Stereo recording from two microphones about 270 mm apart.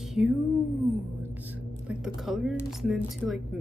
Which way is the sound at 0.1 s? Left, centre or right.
Centre.